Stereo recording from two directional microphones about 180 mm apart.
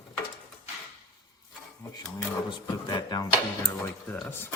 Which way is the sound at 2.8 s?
20° left (ahead or behind).